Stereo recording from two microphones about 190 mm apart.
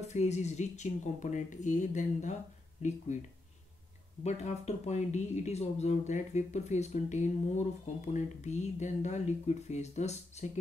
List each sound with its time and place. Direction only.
0.0 s speech: 35° left (ahead or behind)
4.2 s speech: 35° left (ahead or behind)